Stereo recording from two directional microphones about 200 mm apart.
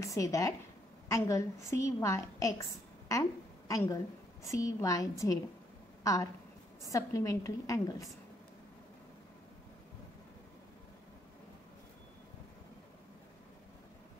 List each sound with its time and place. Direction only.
0.0 s a woman's voice: 15° left (ahead or behind)
6.9 s a woman's voice: 15° left (ahead or behind)